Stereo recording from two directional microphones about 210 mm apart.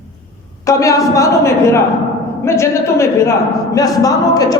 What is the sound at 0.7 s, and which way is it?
A woman's voice, 15° left (ahead or behind).